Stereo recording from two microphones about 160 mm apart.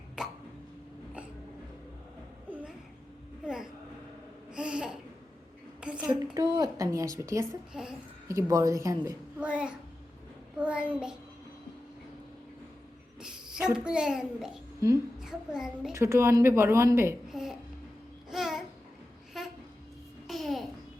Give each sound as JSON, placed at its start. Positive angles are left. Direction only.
{"t": 0.2, "sound": "a sound", "side_deg": -5}
{"t": 2.5, "sound": "a sound", "side_deg": -10}
{"t": 4.5, "sound": "laughter", "side_deg": -5}
{"t": 5.8, "sound": "a sound", "side_deg": -5}
{"t": 6.3, "sound": "speech", "side_deg": -25}
{"t": 7.7, "sound": "a child's voice", "side_deg": -5}
{"t": 8.3, "sound": "speech", "side_deg": -20}
{"t": 9.4, "sound": "speech", "side_deg": -5}
{"t": 13.1, "sound": "a sound", "side_deg": -5}
{"t": 13.7, "sound": "a child's voice", "side_deg": -5}
{"t": 15.9, "sound": "speech", "side_deg": -15}
{"t": 17.2, "sound": "babbling", "side_deg": -5}